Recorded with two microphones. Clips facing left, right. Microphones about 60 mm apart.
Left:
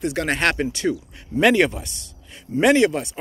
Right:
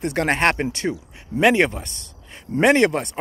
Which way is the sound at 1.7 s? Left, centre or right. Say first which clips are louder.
Even; right.